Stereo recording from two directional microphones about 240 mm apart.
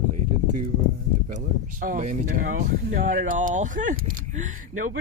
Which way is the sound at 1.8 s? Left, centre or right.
Right.